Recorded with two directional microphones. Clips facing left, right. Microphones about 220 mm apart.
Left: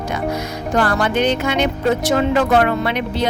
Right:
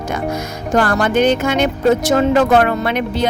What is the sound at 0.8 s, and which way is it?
Speech, 45° right (ahead or behind).